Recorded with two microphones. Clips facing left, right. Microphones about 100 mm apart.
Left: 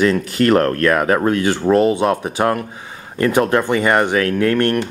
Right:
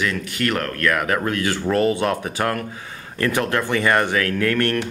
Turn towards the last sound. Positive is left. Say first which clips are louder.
# left 4 dB
turn(degrees=25)  # may be behind; listen again after turning